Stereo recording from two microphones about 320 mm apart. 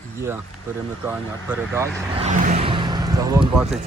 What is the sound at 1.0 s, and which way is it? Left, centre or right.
Speech, centre.